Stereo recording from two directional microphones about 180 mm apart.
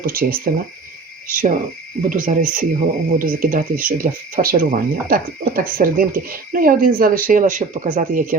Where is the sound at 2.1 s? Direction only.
50° right (ahead or behind).